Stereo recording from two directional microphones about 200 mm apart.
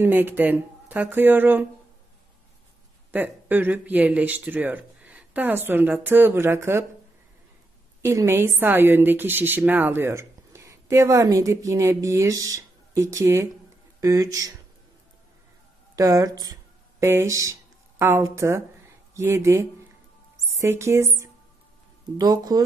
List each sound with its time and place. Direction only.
0.0 s a woman's voice: 10° right (ahead or behind)
3.1 s a woman's voice: 10° right (ahead or behind)
8.0 s a woman's voice: 15° right (ahead or behind)
16.0 s a woman's voice: 20° right (ahead or behind)